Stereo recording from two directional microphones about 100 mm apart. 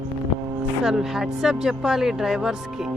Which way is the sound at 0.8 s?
5° right (ahead or behind).